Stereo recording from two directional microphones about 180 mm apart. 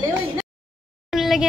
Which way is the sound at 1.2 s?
Centre (ahead or behind).